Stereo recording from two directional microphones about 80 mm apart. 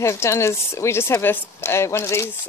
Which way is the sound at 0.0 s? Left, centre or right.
Left.